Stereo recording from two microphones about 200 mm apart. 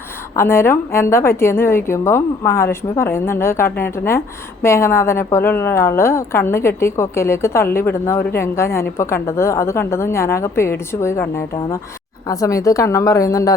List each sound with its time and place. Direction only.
0.3 s a woman's voice: 10° left (ahead or behind)